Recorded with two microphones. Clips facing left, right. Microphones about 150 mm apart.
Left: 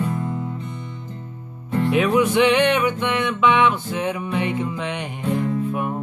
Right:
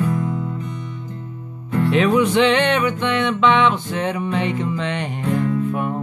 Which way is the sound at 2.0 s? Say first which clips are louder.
Right 1 dB; 10° left (ahead or behind).